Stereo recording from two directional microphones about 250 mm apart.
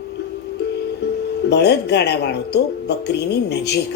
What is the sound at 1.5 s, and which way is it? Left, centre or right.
Speech, left.